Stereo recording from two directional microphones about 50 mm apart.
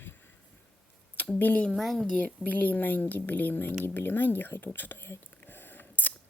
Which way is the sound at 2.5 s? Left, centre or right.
Left.